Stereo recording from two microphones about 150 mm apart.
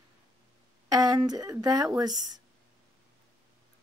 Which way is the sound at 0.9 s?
25° right (ahead or behind).